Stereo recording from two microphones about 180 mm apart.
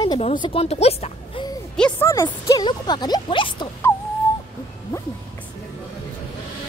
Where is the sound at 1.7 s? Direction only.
5° left (ahead or behind).